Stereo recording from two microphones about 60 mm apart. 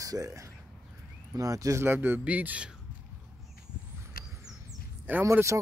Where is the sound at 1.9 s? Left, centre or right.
Right.